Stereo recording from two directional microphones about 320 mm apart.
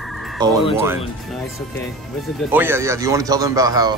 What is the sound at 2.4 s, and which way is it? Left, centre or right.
Speech, centre.